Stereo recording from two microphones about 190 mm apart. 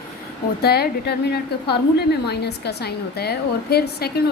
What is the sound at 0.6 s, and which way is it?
A woman's voice, 55° left (ahead or behind).